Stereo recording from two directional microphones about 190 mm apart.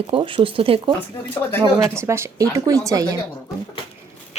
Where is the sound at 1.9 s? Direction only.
15° right (ahead or behind).